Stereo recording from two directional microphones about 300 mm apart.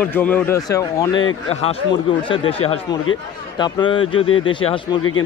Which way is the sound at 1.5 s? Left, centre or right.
Left.